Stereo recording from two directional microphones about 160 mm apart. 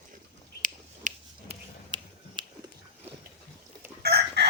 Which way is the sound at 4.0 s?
80° right.